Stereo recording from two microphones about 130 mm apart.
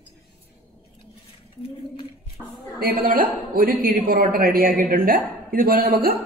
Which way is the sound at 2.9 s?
90° right.